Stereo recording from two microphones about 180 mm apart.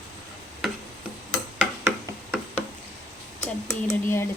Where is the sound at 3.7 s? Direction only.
15° left (ahead or behind).